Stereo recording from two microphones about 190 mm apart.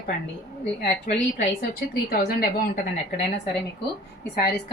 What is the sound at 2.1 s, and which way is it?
Speech, 50° left (ahead or behind).